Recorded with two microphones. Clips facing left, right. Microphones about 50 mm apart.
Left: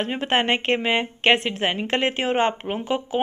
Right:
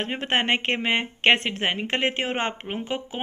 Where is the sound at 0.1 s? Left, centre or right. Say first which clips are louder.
Left 1 dB; right.